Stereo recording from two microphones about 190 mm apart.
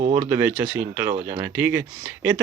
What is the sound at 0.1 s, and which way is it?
Speech, 10° right (ahead or behind).